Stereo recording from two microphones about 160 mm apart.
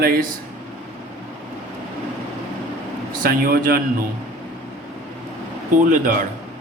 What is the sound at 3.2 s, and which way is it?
Speech, 70° right (ahead or behind).